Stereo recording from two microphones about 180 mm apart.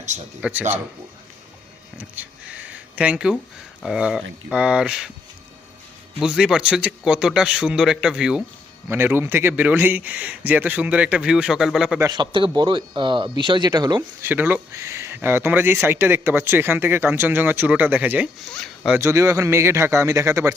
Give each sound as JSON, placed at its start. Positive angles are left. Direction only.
{"t": 0.4, "sound": "speech", "side_deg": -10}
{"t": 2.0, "sound": "a sound", "side_deg": -5}
{"t": 3.8, "sound": "a man's voice", "side_deg": -5}
{"t": 6.1, "sound": "a man's voice", "side_deg": -5}
{"t": 11.9, "sound": "speech", "side_deg": -20}
{"t": 14.3, "sound": "speech", "side_deg": -10}
{"t": 18.4, "sound": "speech", "side_deg": 5}
{"t": 18.9, "sound": "speech", "side_deg": -15}